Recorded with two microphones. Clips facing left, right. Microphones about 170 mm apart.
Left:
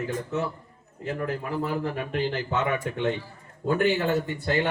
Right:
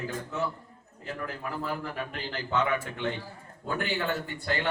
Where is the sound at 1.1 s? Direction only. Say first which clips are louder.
Left 6 dB; 50° left (ahead or behind).